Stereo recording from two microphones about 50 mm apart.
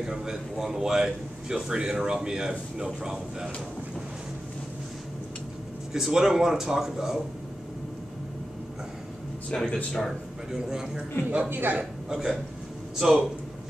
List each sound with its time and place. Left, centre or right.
0.0 s a man's voice: centre
5.9 s a man's voice: centre
9.5 s speech: centre
10.5 s a man's voice: centre
11.2 s speech: right
12.1 s a man's voice: centre